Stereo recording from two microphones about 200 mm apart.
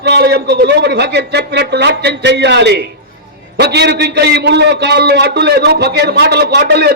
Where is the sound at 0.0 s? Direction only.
55° right (ahead or behind).